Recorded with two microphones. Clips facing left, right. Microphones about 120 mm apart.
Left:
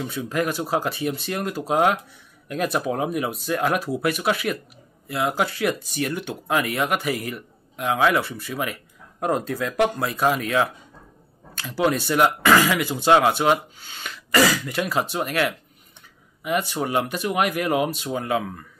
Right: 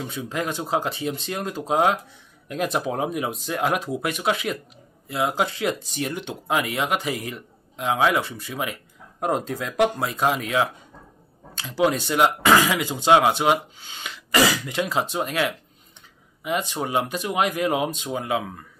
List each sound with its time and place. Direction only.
0.1 s speech: 20° right (ahead or behind)